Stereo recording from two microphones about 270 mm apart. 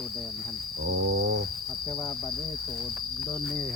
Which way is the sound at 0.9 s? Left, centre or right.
Right.